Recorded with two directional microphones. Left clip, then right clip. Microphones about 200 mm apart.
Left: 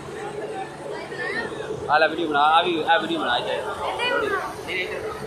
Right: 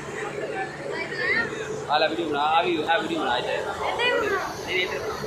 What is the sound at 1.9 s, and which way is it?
A man's voice, 35° left (ahead or behind).